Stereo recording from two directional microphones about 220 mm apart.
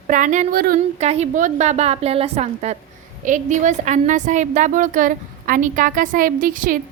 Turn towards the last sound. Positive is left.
turn(degrees=-35)  # may be behind; listen again after turning